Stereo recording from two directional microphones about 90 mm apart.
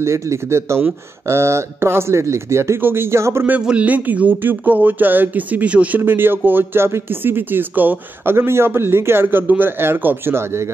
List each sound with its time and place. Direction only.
0.0 s speech: 30° right (ahead or behind)
3.4 s speech: 15° right (ahead or behind)